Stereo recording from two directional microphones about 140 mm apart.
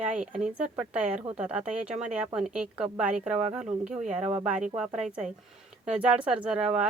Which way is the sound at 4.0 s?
60° right (ahead or behind).